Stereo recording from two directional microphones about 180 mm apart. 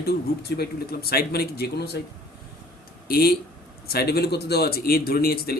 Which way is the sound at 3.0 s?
60° left (ahead or behind).